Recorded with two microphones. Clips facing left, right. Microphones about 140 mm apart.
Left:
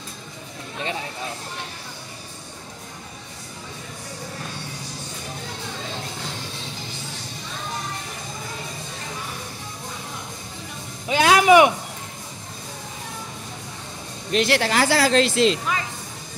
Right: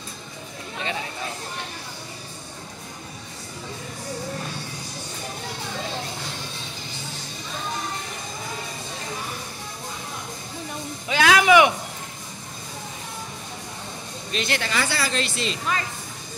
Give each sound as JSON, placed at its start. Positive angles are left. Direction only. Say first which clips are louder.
{"t": 11.1, "sound": "music", "louder": "left 2 dB", "side_deg": 40}
{"t": 14.3, "sound": "speech", "louder": "left 6 dB", "side_deg": 75}